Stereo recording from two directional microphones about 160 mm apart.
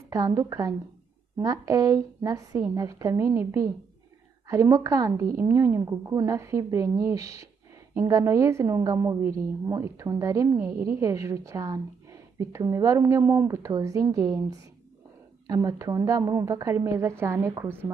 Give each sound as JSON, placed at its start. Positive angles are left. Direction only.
{"t": 0.1, "sound": "a woman's voice", "side_deg": -20}